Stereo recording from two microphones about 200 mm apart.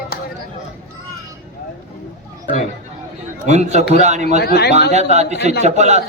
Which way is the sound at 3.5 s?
35° right (ahead or behind).